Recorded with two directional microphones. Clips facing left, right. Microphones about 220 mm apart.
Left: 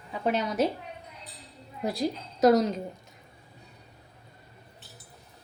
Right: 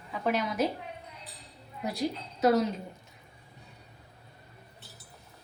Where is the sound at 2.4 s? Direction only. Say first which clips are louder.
Left 4 dB; 40° left (ahead or behind).